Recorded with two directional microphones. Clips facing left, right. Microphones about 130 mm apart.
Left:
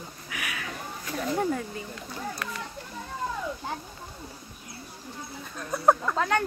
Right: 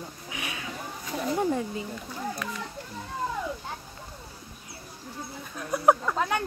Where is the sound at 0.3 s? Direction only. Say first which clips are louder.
Left 1 dB; 25° right (ahead or behind).